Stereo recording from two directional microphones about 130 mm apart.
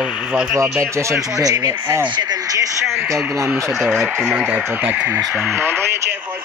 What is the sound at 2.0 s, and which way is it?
Speech, 35° right (ahead or behind).